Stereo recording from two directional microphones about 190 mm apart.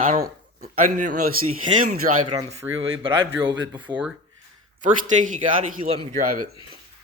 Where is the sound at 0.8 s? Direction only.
40° right (ahead or behind).